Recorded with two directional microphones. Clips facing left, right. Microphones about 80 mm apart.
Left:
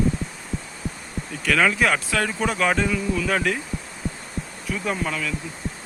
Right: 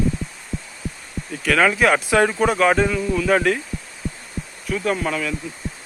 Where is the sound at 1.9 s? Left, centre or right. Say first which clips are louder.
Right 6 dB; right.